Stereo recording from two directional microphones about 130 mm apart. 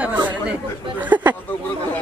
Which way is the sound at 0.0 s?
10° right (ahead or behind).